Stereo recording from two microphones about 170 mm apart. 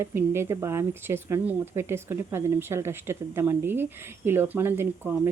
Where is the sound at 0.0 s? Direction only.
15° right (ahead or behind).